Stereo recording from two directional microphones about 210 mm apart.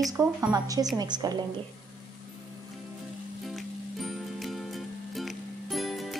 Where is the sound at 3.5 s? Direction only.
Centre (ahead or behind).